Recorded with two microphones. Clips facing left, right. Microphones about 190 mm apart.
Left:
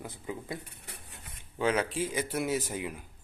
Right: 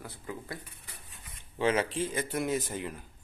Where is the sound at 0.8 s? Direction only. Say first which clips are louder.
Left 3 dB; 65° left (ahead or behind).